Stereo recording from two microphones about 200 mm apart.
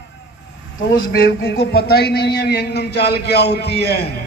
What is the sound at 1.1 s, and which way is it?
Speech, 50° left (ahead or behind).